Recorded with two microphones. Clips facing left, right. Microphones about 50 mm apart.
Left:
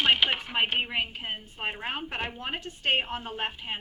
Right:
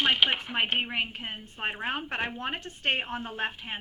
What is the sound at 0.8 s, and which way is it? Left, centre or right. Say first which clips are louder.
A woman's voice: left 1 dB; right.